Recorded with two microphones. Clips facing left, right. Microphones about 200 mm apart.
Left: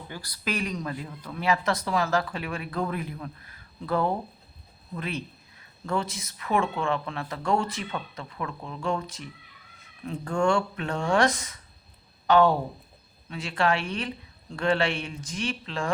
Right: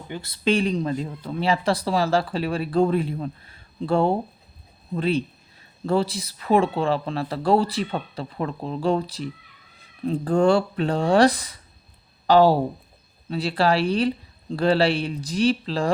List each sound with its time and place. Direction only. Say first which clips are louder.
0.1 s speech: right 10 dB; 25° right (ahead or behind)